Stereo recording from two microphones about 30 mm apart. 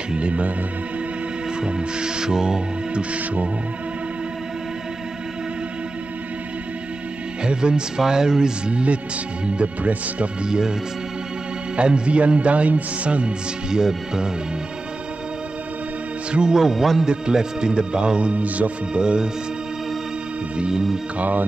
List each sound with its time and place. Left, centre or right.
1.6 s music: right
2.9 s music: right
7.4 s speech: right
8.0 s music: right
9.8 s music: right
10.4 s music: right
11.7 s music: right
13.7 s music: right
16.3 s speech: right
16.5 s speech: centre
17.0 s speech: right
21.2 s speech: right